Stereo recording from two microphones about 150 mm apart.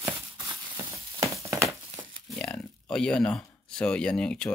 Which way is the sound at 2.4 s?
5° left (ahead or behind).